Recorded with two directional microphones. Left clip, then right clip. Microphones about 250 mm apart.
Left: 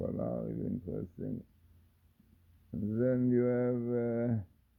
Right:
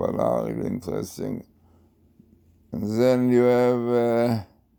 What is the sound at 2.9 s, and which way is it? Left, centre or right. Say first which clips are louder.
Speech: right 11 dB; right.